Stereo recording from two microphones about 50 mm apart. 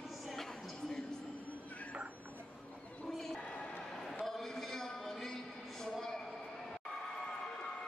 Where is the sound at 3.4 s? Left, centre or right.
Centre.